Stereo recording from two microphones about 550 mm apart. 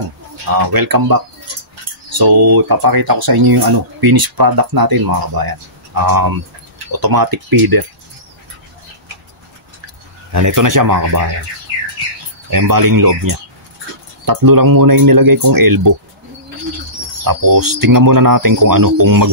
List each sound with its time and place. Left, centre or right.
0.6 s speech: right
10.3 s speech: right
12.4 s speech: right
17.2 s speech: right